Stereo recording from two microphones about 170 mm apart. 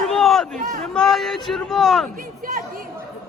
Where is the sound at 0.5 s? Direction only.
45° right (ahead or behind).